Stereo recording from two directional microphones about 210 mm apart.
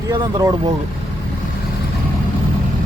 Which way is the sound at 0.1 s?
15° right (ahead or behind).